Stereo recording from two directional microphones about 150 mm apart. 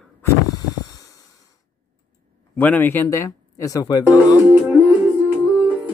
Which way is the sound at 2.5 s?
10° left (ahead or behind).